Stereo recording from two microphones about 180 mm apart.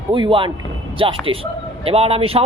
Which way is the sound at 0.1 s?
30° right (ahead or behind).